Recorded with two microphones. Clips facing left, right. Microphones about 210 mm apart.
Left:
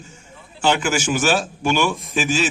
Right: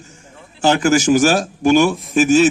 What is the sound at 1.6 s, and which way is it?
Speech, 40° right (ahead or behind).